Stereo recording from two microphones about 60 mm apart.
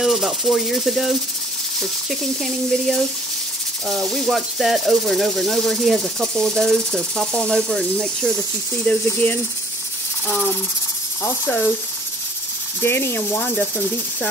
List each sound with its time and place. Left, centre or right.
0.0 s speech: centre
8.8 s speech: left
12.8 s speech: left